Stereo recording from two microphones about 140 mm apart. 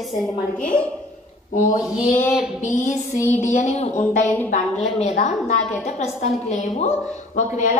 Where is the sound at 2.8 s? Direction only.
60° left (ahead or behind).